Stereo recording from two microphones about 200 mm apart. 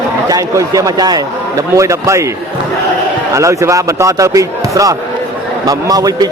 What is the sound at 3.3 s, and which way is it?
A man's voice, 15° right (ahead or behind).